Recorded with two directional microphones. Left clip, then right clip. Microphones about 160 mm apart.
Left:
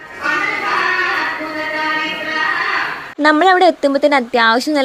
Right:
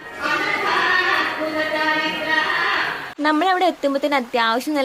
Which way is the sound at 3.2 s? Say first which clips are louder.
Left 7 dB; 45° left (ahead or behind).